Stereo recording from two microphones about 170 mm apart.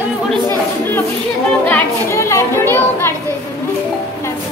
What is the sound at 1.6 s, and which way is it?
Music, 10° left (ahead or behind).